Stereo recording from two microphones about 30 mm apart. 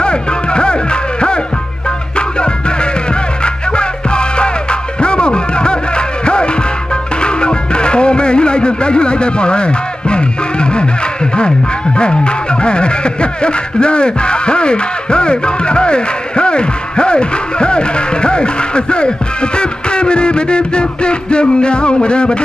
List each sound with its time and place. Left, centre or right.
0.0 s music: left
2.1 s music: left
12.6 s speech: left